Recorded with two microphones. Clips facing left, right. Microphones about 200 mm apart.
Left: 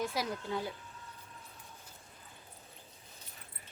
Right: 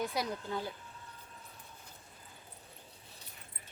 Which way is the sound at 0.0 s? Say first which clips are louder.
Even; centre (ahead or behind).